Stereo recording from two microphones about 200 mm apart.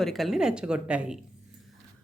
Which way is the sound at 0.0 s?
Centre (ahead or behind).